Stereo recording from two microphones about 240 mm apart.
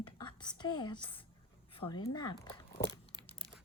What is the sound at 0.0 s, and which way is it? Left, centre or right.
Whispering, centre.